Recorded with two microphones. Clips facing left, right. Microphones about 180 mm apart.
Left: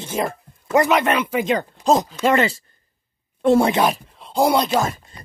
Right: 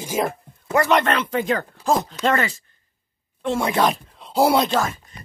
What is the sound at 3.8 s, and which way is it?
Speech, centre (ahead or behind).